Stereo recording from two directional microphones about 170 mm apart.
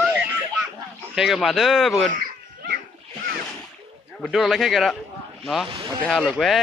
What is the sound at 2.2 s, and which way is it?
Babbling, 70° right (ahead or behind).